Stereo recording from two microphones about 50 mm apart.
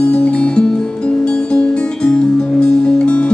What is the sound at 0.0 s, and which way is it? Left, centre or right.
Music, left.